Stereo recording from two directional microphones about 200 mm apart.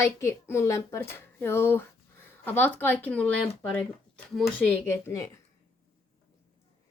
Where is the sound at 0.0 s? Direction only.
15° left (ahead or behind).